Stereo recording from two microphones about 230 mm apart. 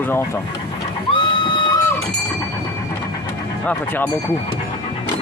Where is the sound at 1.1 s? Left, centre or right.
Left.